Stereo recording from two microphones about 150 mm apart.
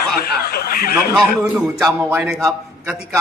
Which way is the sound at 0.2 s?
90° left.